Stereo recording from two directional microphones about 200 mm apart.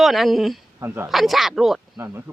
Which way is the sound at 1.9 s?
15° right (ahead or behind).